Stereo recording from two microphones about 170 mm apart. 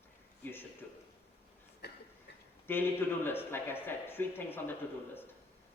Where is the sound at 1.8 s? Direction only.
75° left (ahead or behind).